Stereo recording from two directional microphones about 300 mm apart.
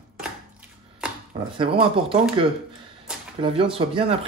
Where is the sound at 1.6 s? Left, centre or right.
Centre.